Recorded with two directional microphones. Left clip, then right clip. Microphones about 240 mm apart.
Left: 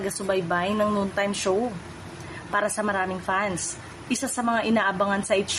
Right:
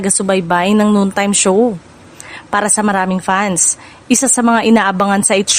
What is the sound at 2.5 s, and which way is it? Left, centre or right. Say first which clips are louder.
A woman's voice: right 10 dB; right.